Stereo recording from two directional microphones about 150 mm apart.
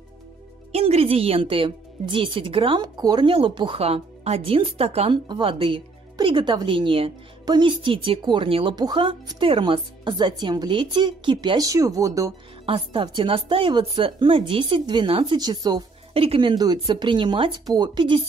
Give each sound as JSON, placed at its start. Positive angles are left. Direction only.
{"t": 0.7, "sound": "speech", "side_deg": -45}
{"t": 12.6, "sound": "speech", "side_deg": -35}
{"t": 16.1, "sound": "speech", "side_deg": -40}